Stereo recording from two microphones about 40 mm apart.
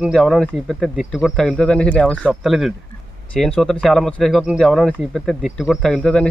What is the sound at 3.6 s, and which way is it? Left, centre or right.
Speech, centre.